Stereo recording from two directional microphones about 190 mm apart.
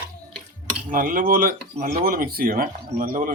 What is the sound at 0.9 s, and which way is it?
Speech, 45° right (ahead or behind).